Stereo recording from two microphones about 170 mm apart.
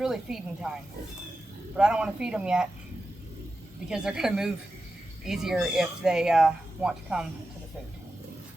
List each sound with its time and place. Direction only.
0.0 s speech: 5° right (ahead or behind)
1.7 s speech: 5° right (ahead or behind)
3.8 s speech: 5° right (ahead or behind)